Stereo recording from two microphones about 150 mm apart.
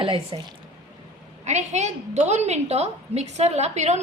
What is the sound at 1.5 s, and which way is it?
A woman's voice, 50° right (ahead or behind).